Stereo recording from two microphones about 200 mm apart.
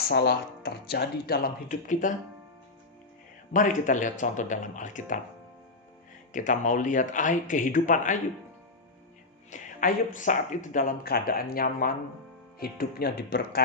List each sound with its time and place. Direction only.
0.1 s speech: 55° left (ahead or behind)
3.5 s speech: 40° left (ahead or behind)
6.3 s speech: 40° left (ahead or behind)
9.5 s speech: 40° left (ahead or behind)